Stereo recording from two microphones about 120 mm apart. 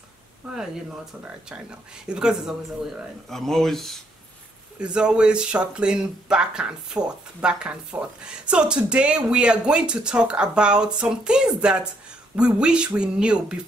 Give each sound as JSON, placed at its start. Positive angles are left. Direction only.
{"t": 1.2, "sound": "speech", "side_deg": -10}
{"t": 4.7, "sound": "speech", "side_deg": -5}